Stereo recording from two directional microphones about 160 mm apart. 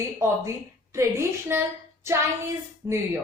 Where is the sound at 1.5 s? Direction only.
15° right (ahead or behind).